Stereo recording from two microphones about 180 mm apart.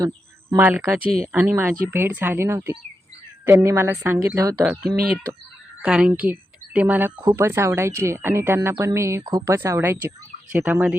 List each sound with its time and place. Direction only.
0.5 s speech: 10° right (ahead or behind)
1.0 s speech: 35° left (ahead or behind)
1.3 s a woman's voice: 10° right (ahead or behind)
7.2 s speech: 20° right (ahead or behind)